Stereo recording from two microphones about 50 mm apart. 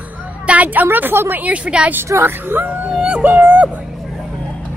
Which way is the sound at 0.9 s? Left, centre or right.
Right.